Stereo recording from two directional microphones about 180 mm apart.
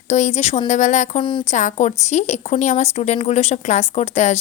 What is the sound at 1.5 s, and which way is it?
A woman's voice, 40° left (ahead or behind).